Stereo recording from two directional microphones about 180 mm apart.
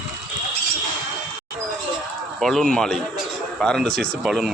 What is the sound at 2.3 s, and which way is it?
A man's voice, centre (ahead or behind).